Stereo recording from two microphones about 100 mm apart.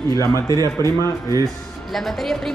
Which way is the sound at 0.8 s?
40° right (ahead or behind).